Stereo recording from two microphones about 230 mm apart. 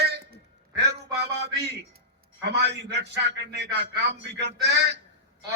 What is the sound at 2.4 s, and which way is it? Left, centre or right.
A man's voice, right.